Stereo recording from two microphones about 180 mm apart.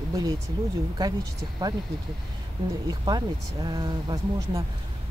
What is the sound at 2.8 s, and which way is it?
Speech, 20° right (ahead or behind).